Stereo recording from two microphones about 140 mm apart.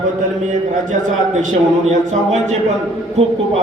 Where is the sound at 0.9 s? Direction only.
65° right (ahead or behind).